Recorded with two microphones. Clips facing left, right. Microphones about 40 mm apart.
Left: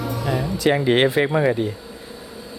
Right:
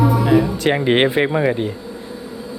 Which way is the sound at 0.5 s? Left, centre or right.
Right.